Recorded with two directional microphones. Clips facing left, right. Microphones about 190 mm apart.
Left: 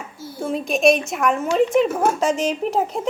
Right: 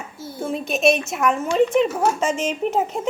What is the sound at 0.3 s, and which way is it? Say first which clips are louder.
Speech: left 2 dB; 5° right (ahead or behind).